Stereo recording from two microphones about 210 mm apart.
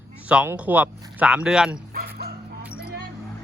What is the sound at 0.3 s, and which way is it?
Speech, 5° right (ahead or behind).